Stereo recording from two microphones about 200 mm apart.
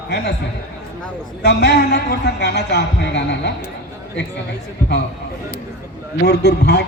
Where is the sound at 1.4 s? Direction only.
55° left (ahead or behind).